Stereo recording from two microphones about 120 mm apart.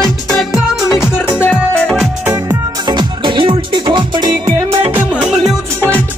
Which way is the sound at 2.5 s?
40° right (ahead or behind).